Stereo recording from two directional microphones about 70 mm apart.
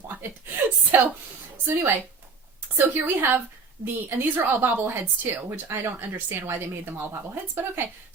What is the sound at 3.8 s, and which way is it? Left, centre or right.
A woman's voice, right.